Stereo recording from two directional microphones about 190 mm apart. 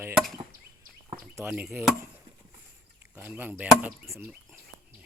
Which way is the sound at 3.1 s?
5° right (ahead or behind).